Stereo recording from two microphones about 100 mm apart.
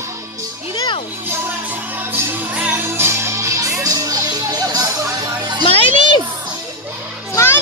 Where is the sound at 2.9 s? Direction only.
25° right (ahead or behind); by 5.6 s 40° right (ahead or behind).